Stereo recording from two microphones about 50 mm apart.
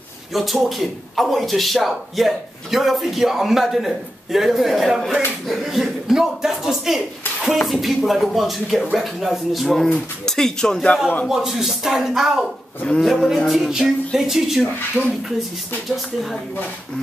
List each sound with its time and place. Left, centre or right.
0.3 s a man's voice: centre
9.8 s speech: centre
11.2 s speech: centre
13.0 s a man's voice: centre
15.0 s speech: right